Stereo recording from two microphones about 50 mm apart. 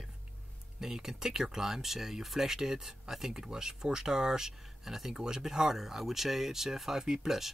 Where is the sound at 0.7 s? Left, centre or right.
Centre.